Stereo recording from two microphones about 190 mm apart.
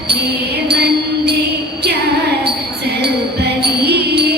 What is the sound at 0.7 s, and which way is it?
Music, 60° right (ahead or behind).